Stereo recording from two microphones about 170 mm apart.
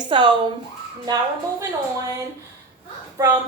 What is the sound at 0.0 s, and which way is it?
Speech, 25° right (ahead or behind).